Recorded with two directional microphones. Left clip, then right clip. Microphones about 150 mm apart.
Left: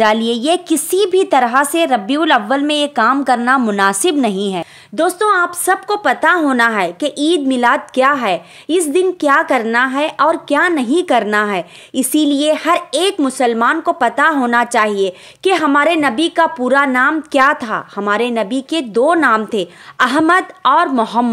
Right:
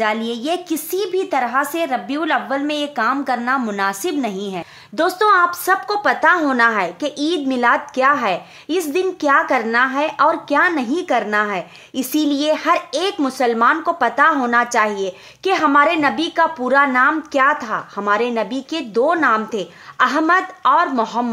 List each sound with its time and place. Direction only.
0.0 s a woman's voice: 60° left (ahead or behind)
4.9 s a woman's voice: 15° left (ahead or behind)